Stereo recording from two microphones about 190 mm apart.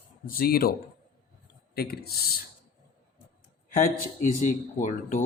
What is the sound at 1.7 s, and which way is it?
Speech, 55° left (ahead or behind).